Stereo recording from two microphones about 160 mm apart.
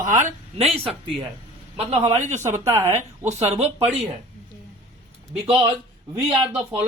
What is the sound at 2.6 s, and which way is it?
Speech, 15° right (ahead or behind).